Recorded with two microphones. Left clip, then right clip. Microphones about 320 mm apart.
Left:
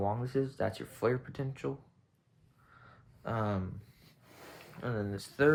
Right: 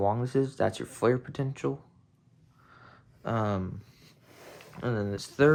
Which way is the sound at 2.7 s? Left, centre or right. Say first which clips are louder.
Right 4 dB; right.